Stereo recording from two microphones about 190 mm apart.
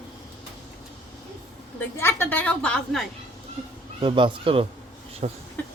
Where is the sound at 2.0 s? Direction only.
10° left (ahead or behind).